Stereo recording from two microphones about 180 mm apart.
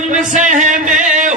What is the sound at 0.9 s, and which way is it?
Music, 45° right (ahead or behind).